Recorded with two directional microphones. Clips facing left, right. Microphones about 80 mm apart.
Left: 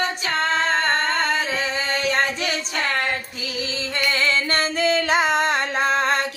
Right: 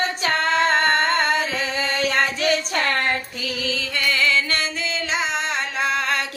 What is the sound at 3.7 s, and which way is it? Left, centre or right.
Music, left.